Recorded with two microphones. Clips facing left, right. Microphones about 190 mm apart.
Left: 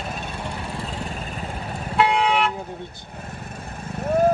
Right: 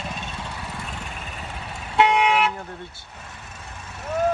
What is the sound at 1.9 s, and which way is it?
Vehicle, 15° right (ahead or behind).